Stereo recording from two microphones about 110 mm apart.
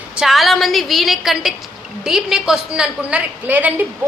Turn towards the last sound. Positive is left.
turn(degrees=-15)  # may be behind; listen again after turning